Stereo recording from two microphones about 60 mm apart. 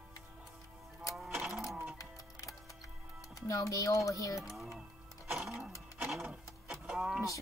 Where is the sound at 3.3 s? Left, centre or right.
Left.